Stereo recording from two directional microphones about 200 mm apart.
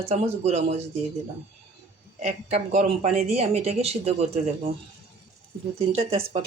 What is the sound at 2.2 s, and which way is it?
Speech, 30° right (ahead or behind).